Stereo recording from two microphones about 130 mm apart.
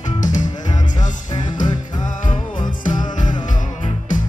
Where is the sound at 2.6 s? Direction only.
80° left.